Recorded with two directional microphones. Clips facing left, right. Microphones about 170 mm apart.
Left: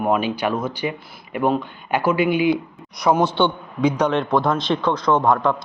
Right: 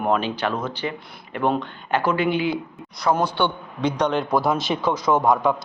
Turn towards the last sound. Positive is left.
turn(degrees=-5)  # may be behind; listen again after turning